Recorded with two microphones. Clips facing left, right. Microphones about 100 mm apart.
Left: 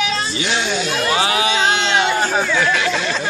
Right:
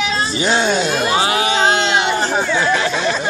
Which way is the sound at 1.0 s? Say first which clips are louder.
Right 1 dB; 30° right (ahead or behind).